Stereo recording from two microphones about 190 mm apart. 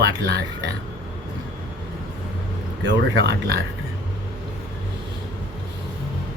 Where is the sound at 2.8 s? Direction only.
60° right (ahead or behind).